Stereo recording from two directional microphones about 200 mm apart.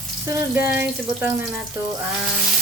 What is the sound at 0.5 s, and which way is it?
Speech, 10° right (ahead or behind).